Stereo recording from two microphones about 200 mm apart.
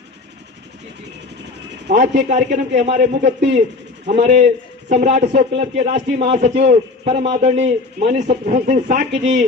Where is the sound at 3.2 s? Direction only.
60° right (ahead or behind).